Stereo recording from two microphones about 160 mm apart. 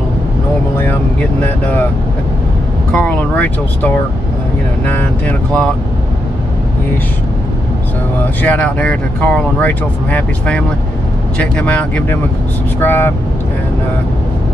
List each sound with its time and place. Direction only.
1.4 s speech: 10° left (ahead or behind)
2.9 s speech: 5° left (ahead or behind)
8.4 s speech: 10° left (ahead or behind)